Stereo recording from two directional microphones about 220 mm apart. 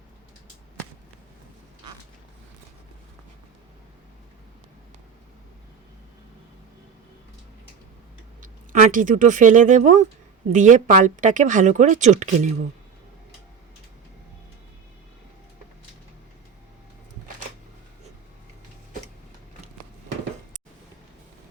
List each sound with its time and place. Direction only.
8.4 s speech: 35° right (ahead or behind)